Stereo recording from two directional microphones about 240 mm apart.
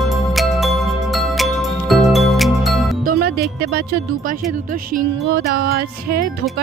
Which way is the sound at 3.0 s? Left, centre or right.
Right.